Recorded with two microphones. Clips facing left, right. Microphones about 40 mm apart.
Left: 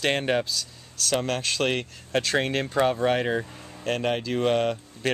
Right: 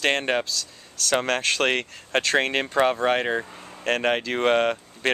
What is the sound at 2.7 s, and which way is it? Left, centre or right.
Speech, right.